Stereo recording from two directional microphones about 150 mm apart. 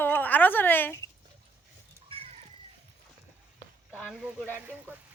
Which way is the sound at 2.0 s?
40° right (ahead or behind).